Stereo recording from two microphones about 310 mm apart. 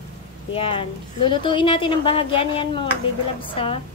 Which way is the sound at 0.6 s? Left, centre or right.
Centre.